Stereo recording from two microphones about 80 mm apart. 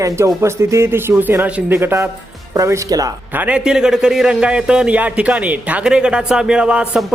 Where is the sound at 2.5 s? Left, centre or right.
Right.